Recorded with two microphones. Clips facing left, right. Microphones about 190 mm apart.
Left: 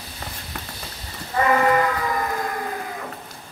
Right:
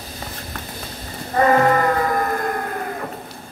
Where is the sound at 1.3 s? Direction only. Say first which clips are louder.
Right 3 dB; 45° right (ahead or behind).